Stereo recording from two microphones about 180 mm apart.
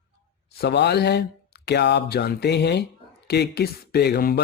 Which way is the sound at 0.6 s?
70° left (ahead or behind).